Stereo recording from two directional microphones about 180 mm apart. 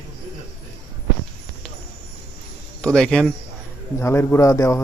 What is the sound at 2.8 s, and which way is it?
Speech, 5° left (ahead or behind).